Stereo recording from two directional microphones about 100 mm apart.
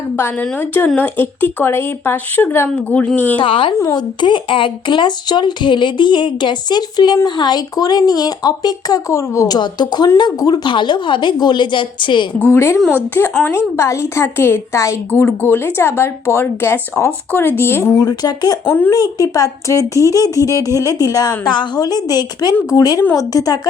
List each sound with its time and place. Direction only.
0.9 s a woman's voice: 20° left (ahead or behind)
3.4 s a woman's voice: 60° left (ahead or behind); by 9.6 s 30° left (ahead or behind)
9.6 s speech: 45° left (ahead or behind)
12.5 s a woman's voice: 25° left (ahead or behind)
18.1 s speech: 40° left (ahead or behind)
18.6 s a woman's voice: 20° left (ahead or behind)
18.9 s speech: 40° left (ahead or behind)